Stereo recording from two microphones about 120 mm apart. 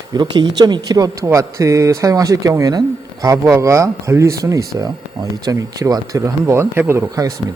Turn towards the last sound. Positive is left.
turn(degrees=-25)  # may be behind; listen again after turning